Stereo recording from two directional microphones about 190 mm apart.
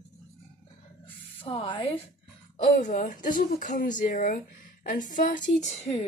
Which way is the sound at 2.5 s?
40° left (ahead or behind).